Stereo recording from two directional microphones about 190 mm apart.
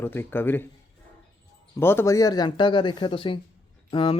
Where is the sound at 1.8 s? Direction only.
10° left (ahead or behind).